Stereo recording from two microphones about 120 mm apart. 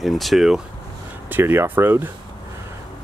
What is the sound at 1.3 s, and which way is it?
Speech, 15° right (ahead or behind).